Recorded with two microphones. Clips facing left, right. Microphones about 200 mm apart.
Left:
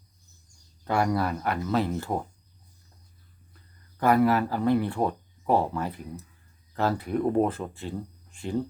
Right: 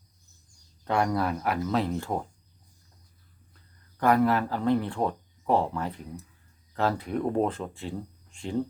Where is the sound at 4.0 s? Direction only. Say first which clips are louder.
Left 1 dB; 5° left (ahead or behind).